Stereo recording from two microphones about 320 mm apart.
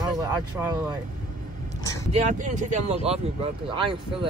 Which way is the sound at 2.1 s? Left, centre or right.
Right.